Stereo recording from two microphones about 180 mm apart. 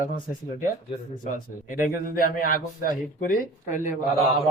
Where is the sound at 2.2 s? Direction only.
50° left (ahead or behind).